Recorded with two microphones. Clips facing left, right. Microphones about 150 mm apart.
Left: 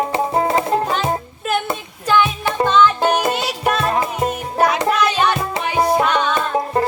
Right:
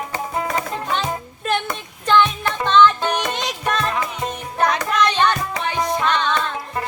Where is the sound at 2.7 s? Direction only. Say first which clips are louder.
Right 1 dB; 10° left (ahead or behind).